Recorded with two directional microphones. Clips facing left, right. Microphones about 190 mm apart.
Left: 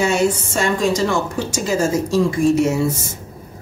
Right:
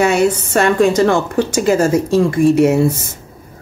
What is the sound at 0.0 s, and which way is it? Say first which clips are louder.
A woman's voice: right 4 dB; 65° right (ahead or behind).